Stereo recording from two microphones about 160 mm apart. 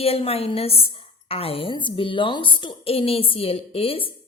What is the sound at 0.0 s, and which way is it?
A woman's voice, 40° left (ahead or behind).